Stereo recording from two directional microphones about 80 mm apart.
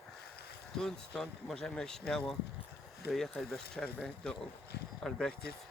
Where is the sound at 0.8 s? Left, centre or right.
Centre.